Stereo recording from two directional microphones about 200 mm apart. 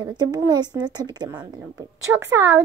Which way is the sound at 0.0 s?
20° right (ahead or behind).